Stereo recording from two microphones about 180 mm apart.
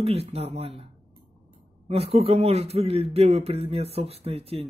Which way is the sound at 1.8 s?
35° right (ahead or behind).